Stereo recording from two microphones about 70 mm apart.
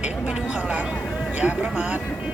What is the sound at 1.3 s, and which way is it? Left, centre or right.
Speech, centre.